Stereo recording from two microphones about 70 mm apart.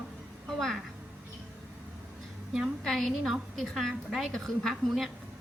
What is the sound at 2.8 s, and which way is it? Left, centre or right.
A woman's voice, centre.